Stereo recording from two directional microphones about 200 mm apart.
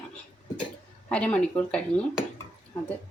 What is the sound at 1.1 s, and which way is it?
Speech, 5° left (ahead or behind).